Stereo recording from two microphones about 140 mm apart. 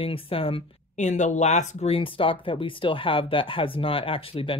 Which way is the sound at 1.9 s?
40° left (ahead or behind).